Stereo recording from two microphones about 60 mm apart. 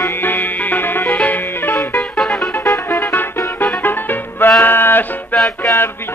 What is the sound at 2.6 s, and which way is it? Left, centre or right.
Music, left.